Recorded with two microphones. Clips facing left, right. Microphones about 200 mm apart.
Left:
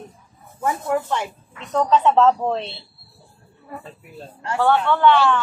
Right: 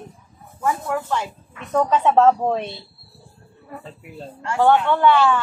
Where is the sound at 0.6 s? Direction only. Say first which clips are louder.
Left 1 dB; 20° left (ahead or behind).